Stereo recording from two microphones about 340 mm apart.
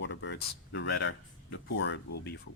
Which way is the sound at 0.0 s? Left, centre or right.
Left.